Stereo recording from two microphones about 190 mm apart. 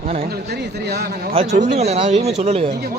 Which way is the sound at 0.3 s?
60° right (ahead or behind).